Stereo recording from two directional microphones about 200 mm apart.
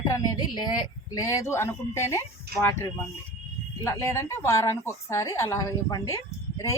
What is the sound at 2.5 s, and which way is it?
Speech, 50° right (ahead or behind).